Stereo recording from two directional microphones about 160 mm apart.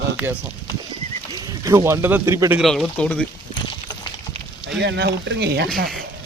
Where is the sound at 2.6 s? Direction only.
Centre (ahead or behind).